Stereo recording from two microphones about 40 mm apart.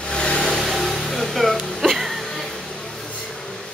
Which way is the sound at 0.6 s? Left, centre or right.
Centre.